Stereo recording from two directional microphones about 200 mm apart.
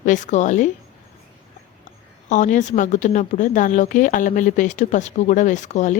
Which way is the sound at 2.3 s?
40° left (ahead or behind).